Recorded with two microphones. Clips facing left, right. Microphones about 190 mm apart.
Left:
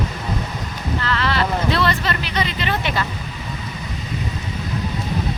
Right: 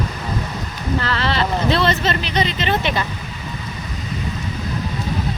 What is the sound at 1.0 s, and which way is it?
Speech, 30° right (ahead or behind).